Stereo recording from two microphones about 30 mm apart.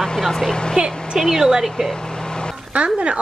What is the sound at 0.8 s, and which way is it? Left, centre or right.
Speech, right.